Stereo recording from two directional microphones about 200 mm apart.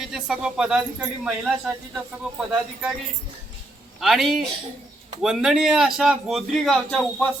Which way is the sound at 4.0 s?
Centre (ahead or behind).